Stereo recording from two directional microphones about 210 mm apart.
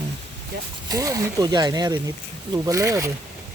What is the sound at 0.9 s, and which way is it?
Speech, 15° right (ahead or behind).